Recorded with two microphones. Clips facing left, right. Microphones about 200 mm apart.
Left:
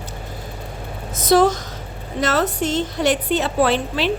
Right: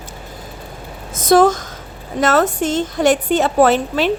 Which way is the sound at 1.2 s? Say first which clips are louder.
Right 3 dB; 50° right (ahead or behind).